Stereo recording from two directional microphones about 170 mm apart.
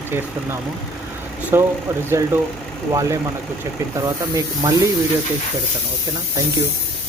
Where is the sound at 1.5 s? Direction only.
15° right (ahead or behind).